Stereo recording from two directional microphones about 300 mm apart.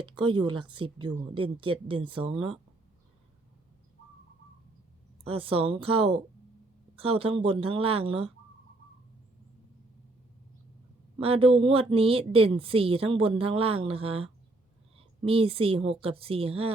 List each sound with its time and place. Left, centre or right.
0.0 s speech: centre
5.2 s a woman's voice: centre
11.2 s a woman's voice: centre